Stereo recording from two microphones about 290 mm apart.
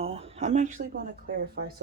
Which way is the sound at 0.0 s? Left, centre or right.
Centre.